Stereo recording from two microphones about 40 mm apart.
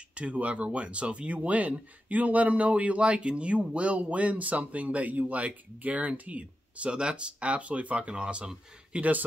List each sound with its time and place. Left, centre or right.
0.1 s speech: right
6.9 s speech: right
8.9 s speech: right